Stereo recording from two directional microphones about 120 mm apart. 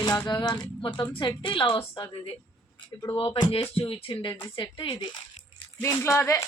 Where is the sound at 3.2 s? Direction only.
45° left (ahead or behind).